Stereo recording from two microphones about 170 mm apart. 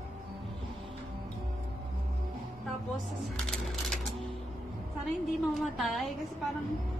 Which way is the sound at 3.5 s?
Centre (ahead or behind).